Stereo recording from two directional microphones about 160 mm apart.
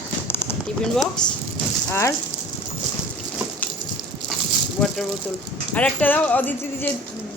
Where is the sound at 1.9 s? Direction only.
20° left (ahead or behind).